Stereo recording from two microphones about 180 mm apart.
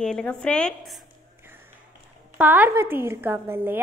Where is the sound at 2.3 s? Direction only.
10° right (ahead or behind).